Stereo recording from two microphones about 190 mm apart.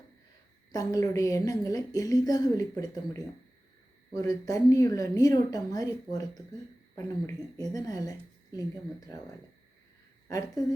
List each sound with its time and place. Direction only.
0.7 s a woman's voice: 20° left (ahead or behind)
7.7 s a woman's voice: 20° left (ahead or behind)
10.2 s a woman's voice: 20° left (ahead or behind)